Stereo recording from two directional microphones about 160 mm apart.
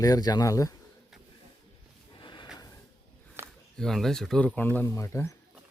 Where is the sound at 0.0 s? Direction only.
25° left (ahead or behind).